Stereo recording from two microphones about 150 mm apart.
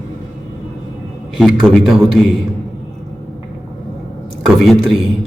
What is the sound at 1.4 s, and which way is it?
Speech, centre (ahead or behind).